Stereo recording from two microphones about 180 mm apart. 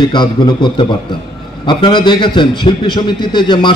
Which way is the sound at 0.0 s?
25° left (ahead or behind).